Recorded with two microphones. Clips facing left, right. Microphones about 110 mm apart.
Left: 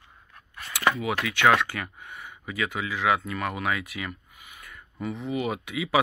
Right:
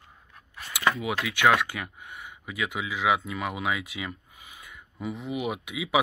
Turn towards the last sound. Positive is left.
turn(degrees=-10)  # may be behind; listen again after turning